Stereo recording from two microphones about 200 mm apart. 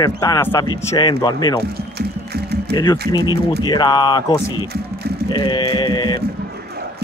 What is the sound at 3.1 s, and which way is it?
Speech, 20° left (ahead or behind).